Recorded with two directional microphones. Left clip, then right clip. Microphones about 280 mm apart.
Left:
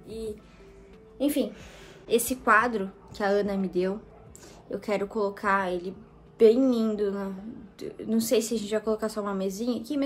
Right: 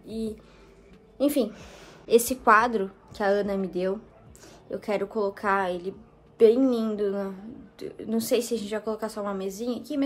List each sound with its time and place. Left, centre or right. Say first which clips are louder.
1.1 s a woman's voice: right 3 dB; centre